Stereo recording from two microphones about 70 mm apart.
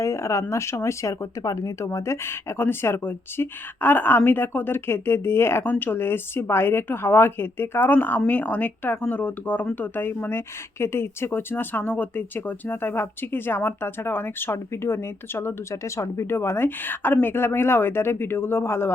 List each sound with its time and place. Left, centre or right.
0.0 s a sound: left
0.5 s speech: left
15.7 s speech: left
16.3 s speech: left